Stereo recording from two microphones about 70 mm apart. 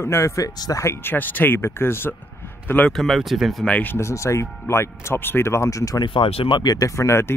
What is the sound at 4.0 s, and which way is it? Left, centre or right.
Speech, left.